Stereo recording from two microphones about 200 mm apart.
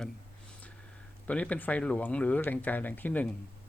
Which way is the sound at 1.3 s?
5° left (ahead or behind).